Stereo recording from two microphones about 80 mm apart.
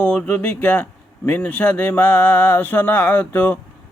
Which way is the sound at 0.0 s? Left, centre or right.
Centre.